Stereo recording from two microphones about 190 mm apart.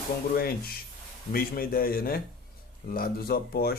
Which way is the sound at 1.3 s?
50° left (ahead or behind).